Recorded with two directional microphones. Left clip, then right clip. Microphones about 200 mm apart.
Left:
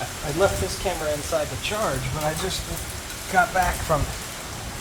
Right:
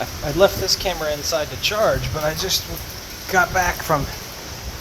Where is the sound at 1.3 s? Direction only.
35° right (ahead or behind).